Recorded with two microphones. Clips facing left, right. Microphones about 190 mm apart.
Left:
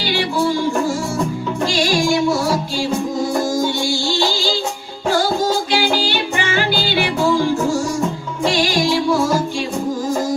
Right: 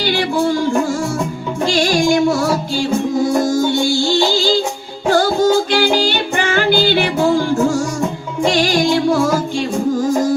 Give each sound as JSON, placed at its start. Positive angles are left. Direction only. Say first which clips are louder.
{"t": 5.7, "sound": "music", "louder": "right 3 dB", "side_deg": -50}